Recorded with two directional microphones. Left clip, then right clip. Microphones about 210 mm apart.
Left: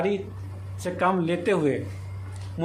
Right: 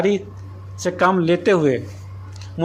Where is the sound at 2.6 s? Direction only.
20° right (ahead or behind).